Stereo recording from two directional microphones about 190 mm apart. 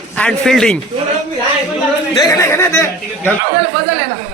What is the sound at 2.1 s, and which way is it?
Speech, 20° left (ahead or behind).